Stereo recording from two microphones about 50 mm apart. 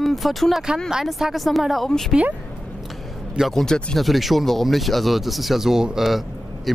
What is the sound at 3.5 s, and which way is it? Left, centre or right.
Speech, centre.